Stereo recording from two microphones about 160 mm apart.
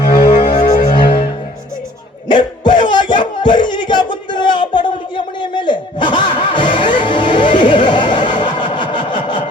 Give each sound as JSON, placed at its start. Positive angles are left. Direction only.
{"t": 0.2, "sound": "music", "side_deg": 35}
{"t": 0.6, "sound": "music", "side_deg": 60}
{"t": 0.9, "sound": "music", "side_deg": 30}
{"t": 2.2, "sound": "a sound", "side_deg": 30}